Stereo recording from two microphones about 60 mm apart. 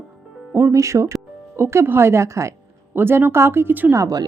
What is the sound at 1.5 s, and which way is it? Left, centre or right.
Speech, right.